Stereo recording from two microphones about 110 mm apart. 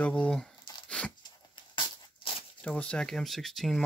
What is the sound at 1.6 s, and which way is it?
Crushing, 50° left (ahead or behind).